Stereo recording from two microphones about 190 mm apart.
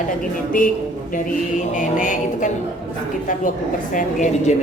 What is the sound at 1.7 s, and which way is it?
Speech, 40° left (ahead or behind).